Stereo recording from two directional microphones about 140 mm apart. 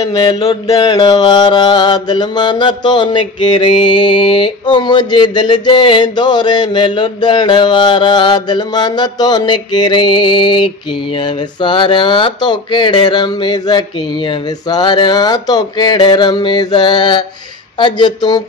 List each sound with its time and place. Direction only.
0.1 s mantra: 35° left (ahead or behind)